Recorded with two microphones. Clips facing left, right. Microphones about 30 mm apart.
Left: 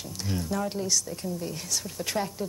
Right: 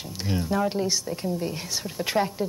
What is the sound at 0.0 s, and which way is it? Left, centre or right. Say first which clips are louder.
A woman's voice: right 4 dB; right.